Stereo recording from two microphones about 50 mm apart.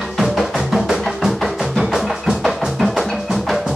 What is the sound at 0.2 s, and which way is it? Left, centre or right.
Music, centre.